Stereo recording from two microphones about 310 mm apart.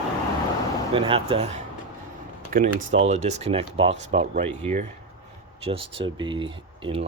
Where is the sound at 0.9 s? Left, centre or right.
Centre.